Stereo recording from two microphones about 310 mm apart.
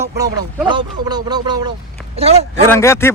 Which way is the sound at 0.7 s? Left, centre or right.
Centre.